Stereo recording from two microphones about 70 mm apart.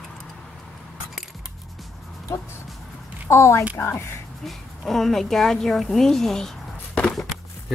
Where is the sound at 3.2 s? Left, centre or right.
Left.